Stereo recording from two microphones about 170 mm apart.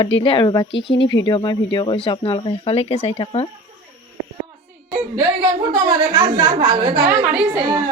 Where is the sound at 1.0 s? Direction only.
90° left.